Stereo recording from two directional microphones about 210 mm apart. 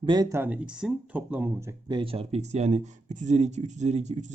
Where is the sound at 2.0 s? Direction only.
25° right (ahead or behind).